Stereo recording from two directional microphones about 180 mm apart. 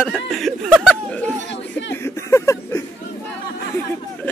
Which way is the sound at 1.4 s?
80° left.